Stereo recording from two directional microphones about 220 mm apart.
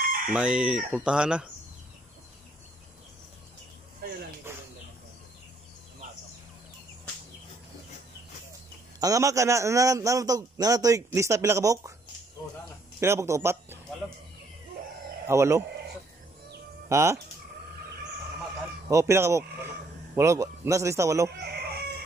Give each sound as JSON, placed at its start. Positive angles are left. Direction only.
{"t": 0.3, "sound": "speech", "side_deg": -5}
{"t": 4.5, "sound": "bird", "side_deg": -10}
{"t": 9.0, "sound": "a man's voice", "side_deg": -15}
{"t": 13.0, "sound": "speech", "side_deg": -10}
{"t": 15.2, "sound": "a man's voice", "side_deg": -15}
{"t": 16.9, "sound": "a man's voice", "side_deg": -15}
{"t": 18.9, "sound": "a man's voice", "side_deg": -15}
{"t": 21.4, "sound": "chicken", "side_deg": -45}